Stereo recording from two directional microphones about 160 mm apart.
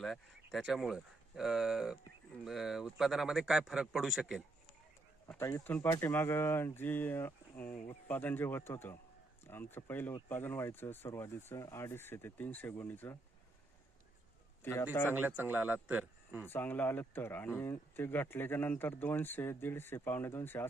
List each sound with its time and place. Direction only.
0.0 s speech: centre (ahead or behind)
5.3 s speech: 15° left (ahead or behind)
14.6 s a man's voice: 15° left (ahead or behind)
15.1 s speech: 10° right (ahead or behind)
16.5 s speech: 10° left (ahead or behind)